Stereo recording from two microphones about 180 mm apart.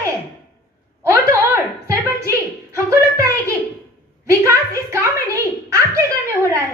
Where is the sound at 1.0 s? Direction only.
15° right (ahead or behind).